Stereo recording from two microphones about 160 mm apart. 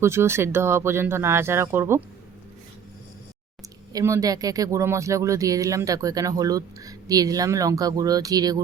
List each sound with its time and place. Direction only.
0.0 s speech: 15° right (ahead or behind)
3.9 s speech: 20° right (ahead or behind)